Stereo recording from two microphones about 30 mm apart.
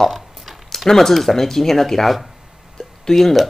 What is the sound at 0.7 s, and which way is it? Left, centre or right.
Speech, centre.